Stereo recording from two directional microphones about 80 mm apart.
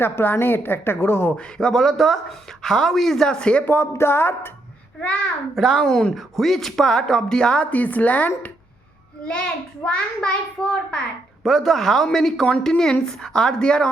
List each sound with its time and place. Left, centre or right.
0.0 s a woman's voice: left
1.4 s a woman's voice: centre
3.7 s a sound: left
4.9 s speech: centre
5.5 s a woman's voice: centre; by 8.3 s left
9.8 s a woman's voice: centre